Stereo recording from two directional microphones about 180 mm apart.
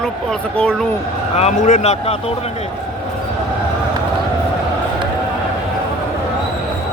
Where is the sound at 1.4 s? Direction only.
40° left (ahead or behind).